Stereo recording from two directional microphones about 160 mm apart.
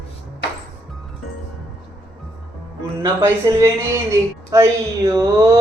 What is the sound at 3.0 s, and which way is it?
Speech, 20° right (ahead or behind).